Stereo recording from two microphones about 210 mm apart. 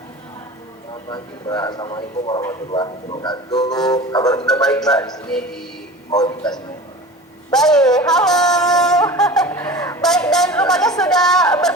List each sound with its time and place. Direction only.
1.1 s a man's voice: 20° left (ahead or behind)
3.9 s music: 20° left (ahead or behind)
4.6 s speech: 5° left (ahead or behind)
6.1 s a man's voice: 20° left (ahead or behind)
7.5 s speech: centre (ahead or behind)
9.1 s snicker: centre (ahead or behind); by 10.0 s 20° left (ahead or behind)
10.0 s a sound: centre (ahead or behind)
10.6 s speech: centre (ahead or behind)